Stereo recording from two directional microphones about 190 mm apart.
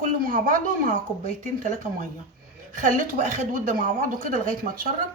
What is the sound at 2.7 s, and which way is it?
Speech, 45° right (ahead or behind).